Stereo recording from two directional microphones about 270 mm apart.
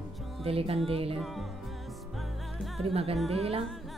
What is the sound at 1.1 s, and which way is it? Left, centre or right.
Music, centre.